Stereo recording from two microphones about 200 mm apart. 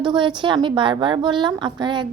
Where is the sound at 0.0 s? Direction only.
25° right (ahead or behind).